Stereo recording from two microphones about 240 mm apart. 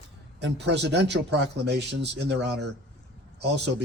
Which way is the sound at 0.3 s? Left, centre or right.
Right.